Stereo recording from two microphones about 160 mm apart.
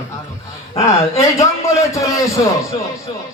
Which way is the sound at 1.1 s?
20° left (ahead or behind).